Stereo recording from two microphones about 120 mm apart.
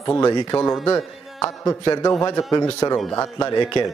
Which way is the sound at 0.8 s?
25° left (ahead or behind).